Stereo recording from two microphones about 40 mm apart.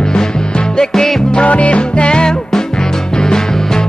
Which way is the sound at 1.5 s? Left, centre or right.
Left.